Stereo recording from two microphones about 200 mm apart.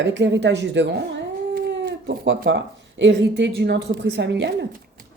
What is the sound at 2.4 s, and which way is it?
A woman's voice, 65° right (ahead or behind).